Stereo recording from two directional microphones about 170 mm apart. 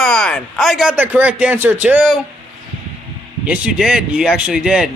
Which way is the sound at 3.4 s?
5° right (ahead or behind).